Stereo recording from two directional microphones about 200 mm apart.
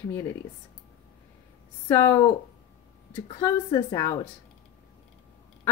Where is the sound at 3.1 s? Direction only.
25° left (ahead or behind).